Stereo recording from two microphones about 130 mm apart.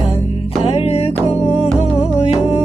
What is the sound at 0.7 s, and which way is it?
Music, 50° left (ahead or behind).